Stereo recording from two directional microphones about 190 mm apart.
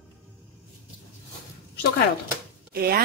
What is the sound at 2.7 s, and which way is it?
Speech, 50° right (ahead or behind).